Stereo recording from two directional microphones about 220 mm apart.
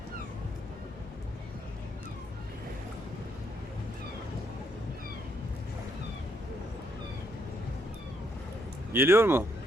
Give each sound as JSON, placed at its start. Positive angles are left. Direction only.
{"t": 8.9, "sound": "speech", "side_deg": -10}